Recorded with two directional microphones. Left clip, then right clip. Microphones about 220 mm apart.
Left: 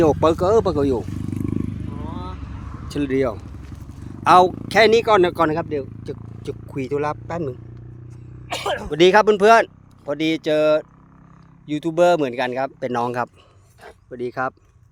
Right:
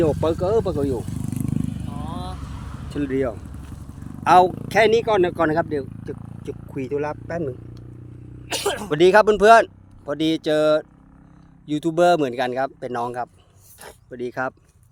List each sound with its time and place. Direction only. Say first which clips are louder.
0.0 s speech: left 4 dB; 25° left (ahead or behind)
1.2 s vehicle: left 2 dB; 50° right (ahead or behind)
2.9 s speech: left 3 dB; 25° left (ahead or behind)
5.5 s speech: right 1 dB; centre (ahead or behind)
6.0 s speech: left 1 dB; 15° left (ahead or behind)
8.4 s a sound: even; 40° right (ahead or behind)
9.1 s speech: right 1 dB; 5° left (ahead or behind)
12.8 s speech: left 4 dB; 25° left (ahead or behind)
14.1 s speech: left 2 dB; 10° left (ahead or behind)